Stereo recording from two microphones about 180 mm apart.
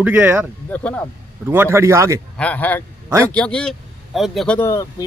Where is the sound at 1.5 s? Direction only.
15° right (ahead or behind).